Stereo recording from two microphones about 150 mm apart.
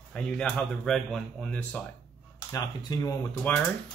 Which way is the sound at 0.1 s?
5° left (ahead or behind).